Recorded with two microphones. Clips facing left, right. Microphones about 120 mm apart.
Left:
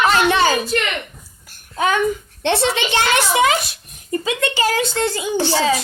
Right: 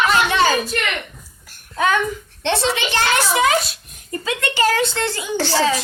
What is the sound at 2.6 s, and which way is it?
A woman's voice, 15° left (ahead or behind).